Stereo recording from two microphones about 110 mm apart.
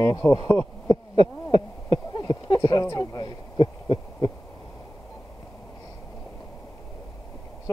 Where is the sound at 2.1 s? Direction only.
40° left (ahead or behind).